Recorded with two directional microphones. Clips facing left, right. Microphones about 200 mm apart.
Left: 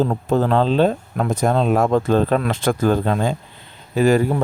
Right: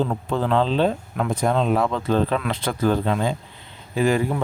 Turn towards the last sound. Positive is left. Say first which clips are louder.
# left 5 dB
turn(degrees=40)  # may be behind; listen again after turning